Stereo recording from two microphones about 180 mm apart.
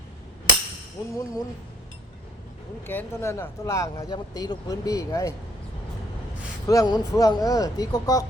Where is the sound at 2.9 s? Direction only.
15° left (ahead or behind).